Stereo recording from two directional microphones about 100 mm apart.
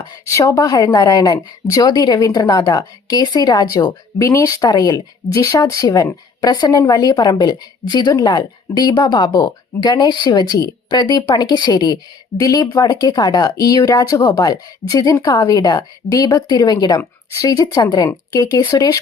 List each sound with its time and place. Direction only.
0.3 s a woman's voice: 30° left (ahead or behind)